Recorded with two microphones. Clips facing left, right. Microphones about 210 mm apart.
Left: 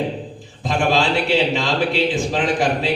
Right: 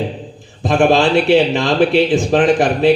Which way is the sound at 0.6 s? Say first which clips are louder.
Right 7 dB; 55° right (ahead or behind).